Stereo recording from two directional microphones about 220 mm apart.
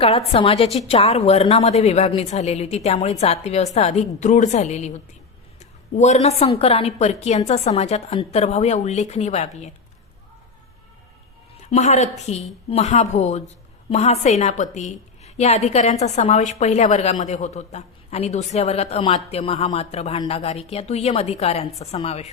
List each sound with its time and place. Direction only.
0.0 s a woman's voice: 25° left (ahead or behind)
11.6 s a woman's voice: 30° left (ahead or behind)